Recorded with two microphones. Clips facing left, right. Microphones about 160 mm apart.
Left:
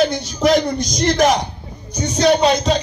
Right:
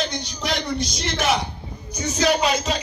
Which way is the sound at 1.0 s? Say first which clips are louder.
Left 8 dB; 40° left (ahead or behind).